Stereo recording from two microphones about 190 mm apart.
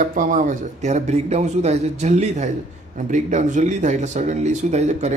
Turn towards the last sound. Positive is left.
turn(degrees=-35)  # may be behind; listen again after turning